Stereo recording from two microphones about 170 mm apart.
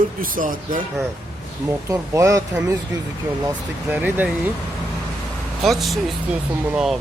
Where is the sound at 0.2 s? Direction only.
55° right (ahead or behind).